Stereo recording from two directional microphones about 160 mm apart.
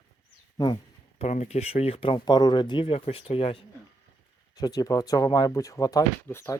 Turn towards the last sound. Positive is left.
turn(degrees=15)  # may be behind; listen again after turning